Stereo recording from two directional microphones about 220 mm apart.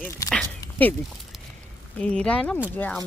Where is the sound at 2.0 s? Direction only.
5° left (ahead or behind).